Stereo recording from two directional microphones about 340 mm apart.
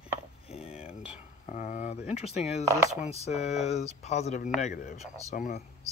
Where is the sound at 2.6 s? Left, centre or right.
Centre.